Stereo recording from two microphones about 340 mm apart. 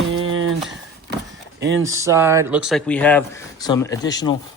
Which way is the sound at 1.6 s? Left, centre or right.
Right.